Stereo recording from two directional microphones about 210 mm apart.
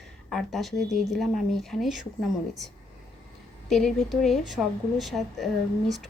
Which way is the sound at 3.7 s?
Centre (ahead or behind).